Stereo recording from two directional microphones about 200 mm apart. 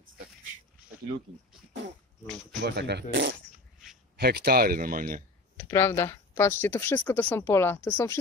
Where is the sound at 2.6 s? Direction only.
55° right (ahead or behind).